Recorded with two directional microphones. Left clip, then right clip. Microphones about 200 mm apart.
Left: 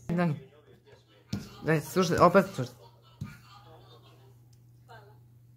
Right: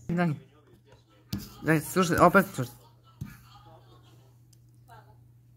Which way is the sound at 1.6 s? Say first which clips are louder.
Right 2 dB; 15° right (ahead or behind).